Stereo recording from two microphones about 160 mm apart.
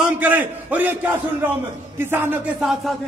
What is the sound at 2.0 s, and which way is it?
Speech, 15° right (ahead or behind).